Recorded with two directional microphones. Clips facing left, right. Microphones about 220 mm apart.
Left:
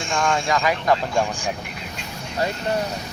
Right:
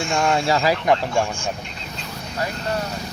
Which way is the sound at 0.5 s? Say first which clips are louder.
Right 2 dB; 35° right (ahead or behind).